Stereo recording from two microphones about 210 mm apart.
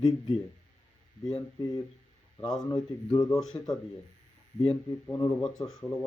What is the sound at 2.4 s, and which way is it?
Speech, centre (ahead or behind).